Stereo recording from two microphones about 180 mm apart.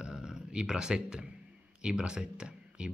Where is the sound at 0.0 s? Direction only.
5° right (ahead or behind).